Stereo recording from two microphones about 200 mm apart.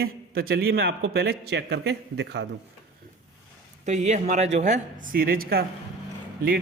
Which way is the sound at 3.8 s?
35° right (ahead or behind).